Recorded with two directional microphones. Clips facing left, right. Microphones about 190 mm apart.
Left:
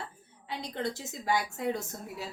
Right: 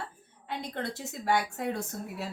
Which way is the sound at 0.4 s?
55° right (ahead or behind).